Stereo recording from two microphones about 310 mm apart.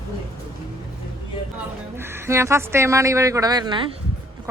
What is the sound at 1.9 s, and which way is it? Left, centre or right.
Speech, centre.